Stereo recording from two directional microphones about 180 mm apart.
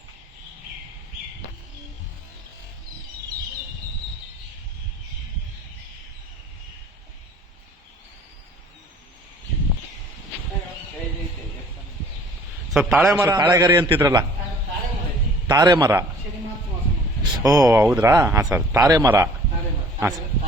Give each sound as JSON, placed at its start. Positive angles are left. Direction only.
{"t": 12.7, "sound": "a man's voice", "side_deg": 0}
{"t": 13.1, "sound": "a man's voice", "side_deg": -20}
{"t": 15.4, "sound": "a man's voice", "side_deg": -20}
{"t": 17.4, "sound": "a man's voice", "side_deg": -20}
{"t": 17.8, "sound": "a man's voice", "side_deg": -10}